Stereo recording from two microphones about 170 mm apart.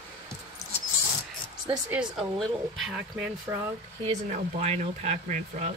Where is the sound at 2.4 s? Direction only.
Centre (ahead or behind).